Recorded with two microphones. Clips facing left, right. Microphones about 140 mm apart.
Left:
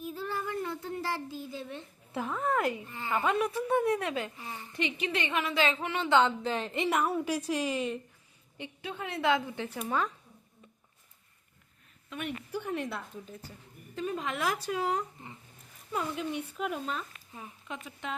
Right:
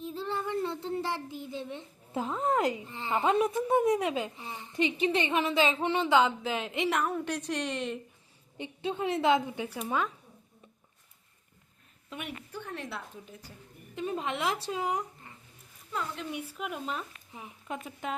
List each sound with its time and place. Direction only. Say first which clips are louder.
0.0 s child singing: right 1 dB; 25° right (ahead or behind)
6.1 s a woman's voice: left 2 dB; 10° right (ahead or behind)
8.5 s a woman's voice: right 6 dB; 20° right (ahead or behind)
12.5 s a woman's voice: left 5 dB; 10° left (ahead or behind)
13.9 s a woman's voice: right 1 dB; 25° right (ahead or behind)
16.3 s speech: left 3 dB; 5° right (ahead or behind)